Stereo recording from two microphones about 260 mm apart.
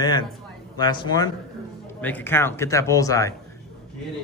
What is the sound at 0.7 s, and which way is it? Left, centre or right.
A man's voice, centre.